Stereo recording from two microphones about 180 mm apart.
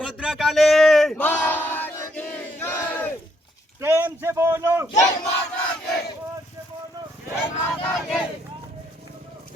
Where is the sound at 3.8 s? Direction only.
10° right (ahead or behind).